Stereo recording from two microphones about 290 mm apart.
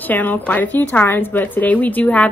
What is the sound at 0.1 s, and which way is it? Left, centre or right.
A woman's voice, centre.